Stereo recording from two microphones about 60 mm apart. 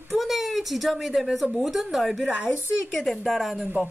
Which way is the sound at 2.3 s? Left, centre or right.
Centre.